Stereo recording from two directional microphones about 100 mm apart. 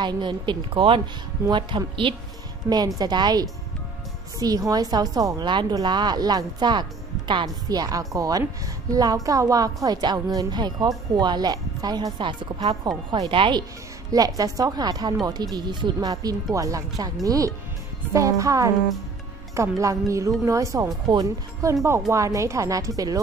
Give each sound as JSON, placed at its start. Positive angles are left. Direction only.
{"t": 0.0, "sound": "a woman's voice", "side_deg": -50}
{"t": 1.5, "sound": "a woman's voice", "side_deg": -50}
{"t": 2.7, "sound": "a woman's voice", "side_deg": -45}
{"t": 7.4, "sound": "a woman's voice", "side_deg": -40}
{"t": 13.3, "sound": "speech", "side_deg": -55}
{"t": 14.1, "sound": "a woman's voice", "side_deg": -40}